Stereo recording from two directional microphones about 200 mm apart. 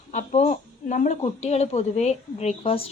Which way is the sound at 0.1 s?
35° left (ahead or behind).